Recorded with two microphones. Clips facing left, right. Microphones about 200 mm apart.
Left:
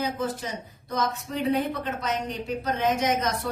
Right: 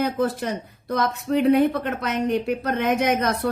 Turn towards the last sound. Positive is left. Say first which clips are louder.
# right 4 dB
turn(degrees=-60)  # may be behind; listen again after turning